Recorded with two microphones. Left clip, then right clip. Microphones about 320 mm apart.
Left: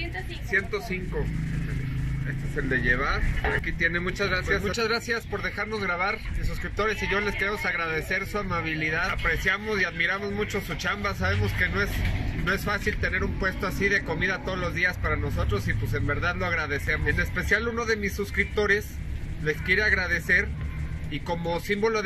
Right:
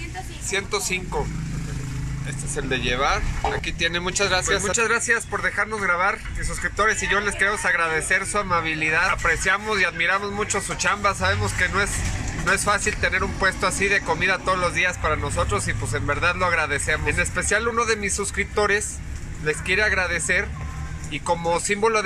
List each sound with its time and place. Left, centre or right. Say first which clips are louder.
0.6 s speech: right 2 dB; right
3.9 s speech: right 5 dB; right
4.5 s speech: right 5 dB; centre